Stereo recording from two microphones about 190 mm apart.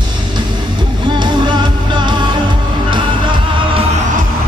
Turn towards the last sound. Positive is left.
turn(degrees=-25)  # may be behind; listen again after turning